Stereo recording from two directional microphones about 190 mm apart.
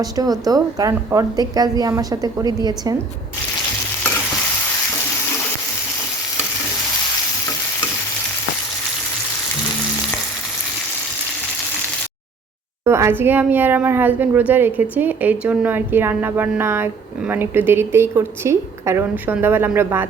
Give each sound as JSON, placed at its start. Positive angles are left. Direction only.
{"t": 0.0, "sound": "a woman's voice", "side_deg": -20}
{"t": 12.8, "sound": "speech", "side_deg": -15}